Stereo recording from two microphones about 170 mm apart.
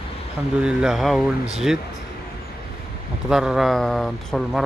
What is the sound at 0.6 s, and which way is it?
Speech, 5° right (ahead or behind).